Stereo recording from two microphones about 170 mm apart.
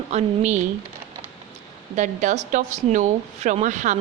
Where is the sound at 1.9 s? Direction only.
45° right (ahead or behind).